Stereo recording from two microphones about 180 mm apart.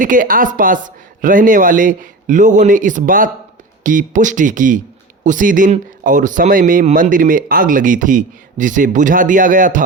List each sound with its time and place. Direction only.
0.0 s speech: 50° right (ahead or behind)